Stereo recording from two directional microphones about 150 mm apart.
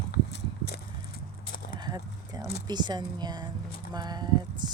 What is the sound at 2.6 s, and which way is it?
Speech, 30° right (ahead or behind).